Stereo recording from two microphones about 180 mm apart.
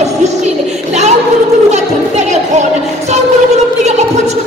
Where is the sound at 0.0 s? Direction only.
40° right (ahead or behind).